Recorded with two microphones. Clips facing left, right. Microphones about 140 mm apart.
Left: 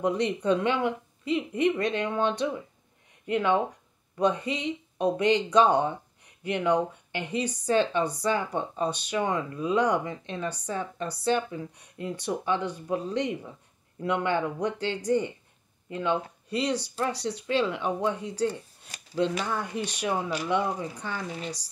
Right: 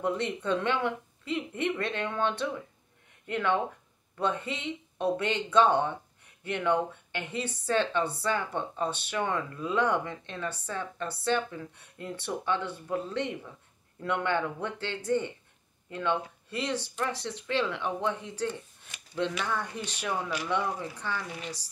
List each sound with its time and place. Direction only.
0.0 s speech: 15° left (ahead or behind)
18.9 s speech: 40° left (ahead or behind)
19.6 s speech: 15° left (ahead or behind)